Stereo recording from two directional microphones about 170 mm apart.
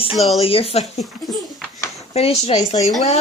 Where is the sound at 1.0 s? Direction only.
Centre (ahead or behind).